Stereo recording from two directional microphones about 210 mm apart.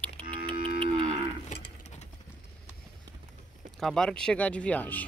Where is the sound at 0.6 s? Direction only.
25° right (ahead or behind).